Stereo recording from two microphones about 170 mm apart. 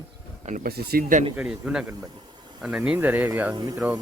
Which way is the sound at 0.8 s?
65° right (ahead or behind).